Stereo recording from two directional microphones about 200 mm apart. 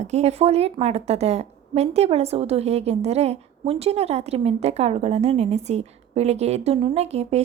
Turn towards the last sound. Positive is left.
turn(degrees=-30)  # may be behind; listen again after turning